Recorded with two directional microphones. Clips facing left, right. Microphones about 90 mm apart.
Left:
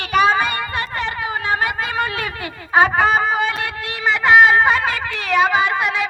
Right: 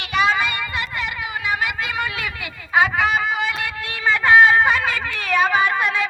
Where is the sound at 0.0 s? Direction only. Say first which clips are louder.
Left 4 dB; 40° left (ahead or behind).